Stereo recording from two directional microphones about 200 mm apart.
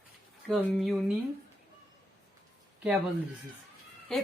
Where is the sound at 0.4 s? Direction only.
Centre (ahead or behind).